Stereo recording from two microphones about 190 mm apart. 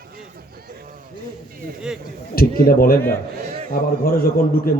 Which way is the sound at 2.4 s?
50° left (ahead or behind).